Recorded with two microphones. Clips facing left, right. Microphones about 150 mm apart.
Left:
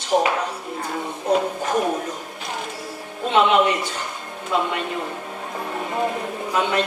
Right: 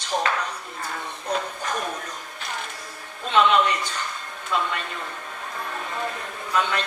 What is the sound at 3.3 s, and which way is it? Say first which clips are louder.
A man's voice: left 2 dB; 20° left (ahead or behind).